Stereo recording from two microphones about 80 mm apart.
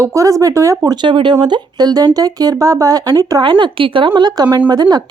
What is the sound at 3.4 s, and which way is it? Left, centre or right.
Speech, right.